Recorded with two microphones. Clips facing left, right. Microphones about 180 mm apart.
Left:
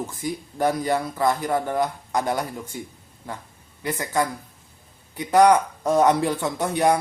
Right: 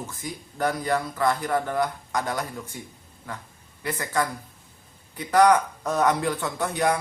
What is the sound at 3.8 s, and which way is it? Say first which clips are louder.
Speech: left 2 dB; 20° left (ahead or behind).